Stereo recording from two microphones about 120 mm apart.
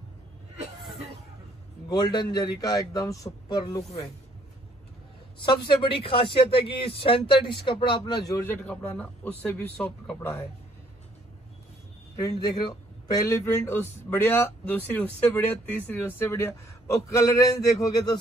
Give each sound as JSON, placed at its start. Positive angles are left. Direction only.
{"t": 1.9, "sound": "a man's voice", "side_deg": 35}
{"t": 5.4, "sound": "speech", "side_deg": 40}
{"t": 8.4, "sound": "speech", "side_deg": 15}
{"t": 12.2, "sound": "speech", "side_deg": 30}